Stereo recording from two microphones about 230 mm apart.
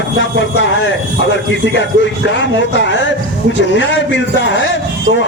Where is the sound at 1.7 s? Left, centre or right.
Left.